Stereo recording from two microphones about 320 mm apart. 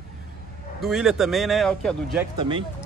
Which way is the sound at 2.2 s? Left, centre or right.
Centre.